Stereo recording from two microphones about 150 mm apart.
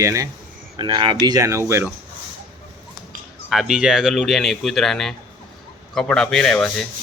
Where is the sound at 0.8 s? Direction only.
35° right (ahead or behind).